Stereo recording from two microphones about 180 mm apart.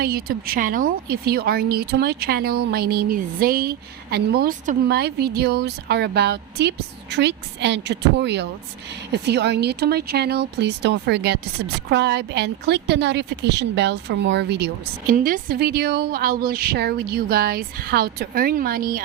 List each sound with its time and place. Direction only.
0.0 s a woman's voice: 55° right (ahead or behind)
15.1 s speech: 50° right (ahead or behind)